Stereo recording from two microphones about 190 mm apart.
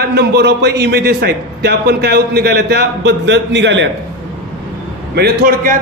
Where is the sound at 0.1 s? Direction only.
60° right (ahead or behind).